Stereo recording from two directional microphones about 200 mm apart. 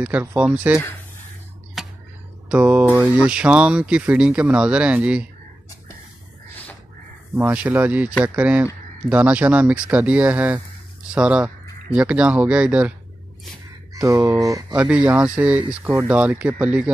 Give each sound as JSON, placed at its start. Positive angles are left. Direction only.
{"t": 0.0, "sound": "speech", "side_deg": -10}
{"t": 1.8, "sound": "tick-tock", "side_deg": 0}
{"t": 2.5, "sound": "speech", "side_deg": -5}
{"t": 7.3, "sound": "speech", "side_deg": -10}
{"t": 13.9, "sound": "speech", "side_deg": -15}